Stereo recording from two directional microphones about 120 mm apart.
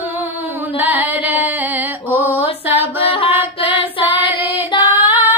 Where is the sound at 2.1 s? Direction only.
15° right (ahead or behind).